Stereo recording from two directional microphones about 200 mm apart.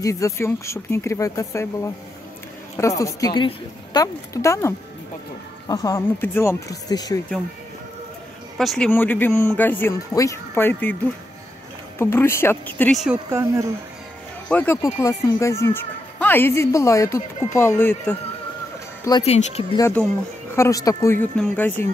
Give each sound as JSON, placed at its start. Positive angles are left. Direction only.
{"t": 0.0, "sound": "speech", "side_deg": 15}
{"t": 3.0, "sound": "speech", "side_deg": 20}
{"t": 8.5, "sound": "speech", "side_deg": 5}
{"t": 12.0, "sound": "speech", "side_deg": 10}
{"t": 13.3, "sound": "speech", "side_deg": -15}
{"t": 14.5, "sound": "speech", "side_deg": 10}
{"t": 19.2, "sound": "speech", "side_deg": 30}
{"t": 19.8, "sound": "speech", "side_deg": 5}